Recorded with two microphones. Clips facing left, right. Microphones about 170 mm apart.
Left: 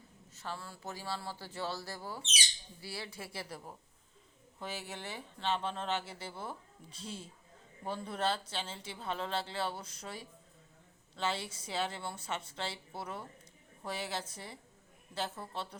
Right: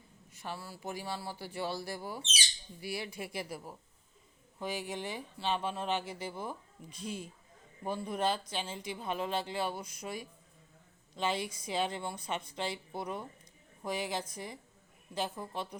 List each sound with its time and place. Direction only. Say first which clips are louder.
0.3 s speech: right 1 dB; 15° right (ahead or behind)